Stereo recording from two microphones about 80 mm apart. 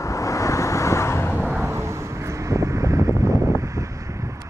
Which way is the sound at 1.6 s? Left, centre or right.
Right.